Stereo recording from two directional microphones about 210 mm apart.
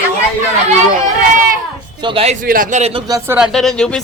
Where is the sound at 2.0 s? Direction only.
25° right (ahead or behind).